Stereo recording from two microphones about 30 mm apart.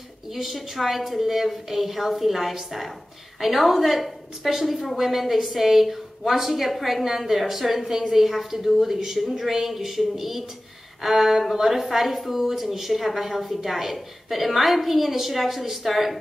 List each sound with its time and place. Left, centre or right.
0.3 s a woman's voice: centre